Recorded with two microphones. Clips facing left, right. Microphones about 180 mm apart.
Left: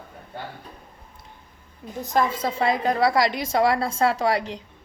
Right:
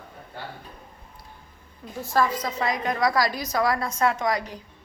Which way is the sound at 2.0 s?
20° left (ahead or behind).